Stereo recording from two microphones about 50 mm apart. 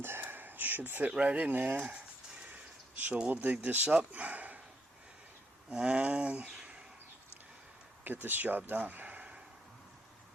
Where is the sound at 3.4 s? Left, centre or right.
Right.